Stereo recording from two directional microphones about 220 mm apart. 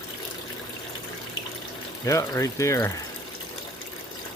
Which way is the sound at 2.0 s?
15° left (ahead or behind).